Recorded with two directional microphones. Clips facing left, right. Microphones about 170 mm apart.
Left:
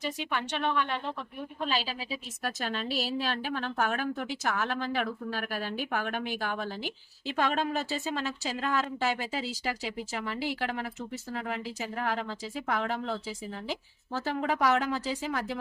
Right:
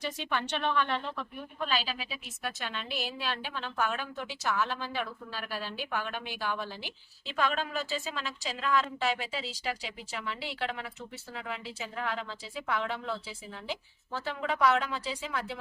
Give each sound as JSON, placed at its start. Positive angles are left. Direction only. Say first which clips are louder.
{"t": 0.2, "sound": "a woman's voice", "louder": "left 1 dB", "side_deg": 10}
{"t": 1.7, "sound": "speech", "louder": "even", "side_deg": 30}
{"t": 2.6, "sound": "a woman's voice", "louder": "left 7 dB", "side_deg": 40}